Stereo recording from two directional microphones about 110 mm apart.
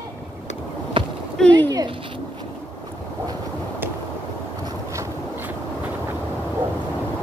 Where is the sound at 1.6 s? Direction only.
35° right (ahead or behind).